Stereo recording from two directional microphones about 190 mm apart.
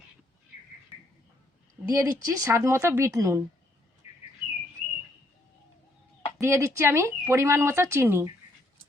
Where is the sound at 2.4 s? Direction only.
15° right (ahead or behind).